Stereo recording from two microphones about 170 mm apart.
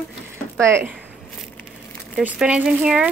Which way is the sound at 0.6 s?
15° right (ahead or behind).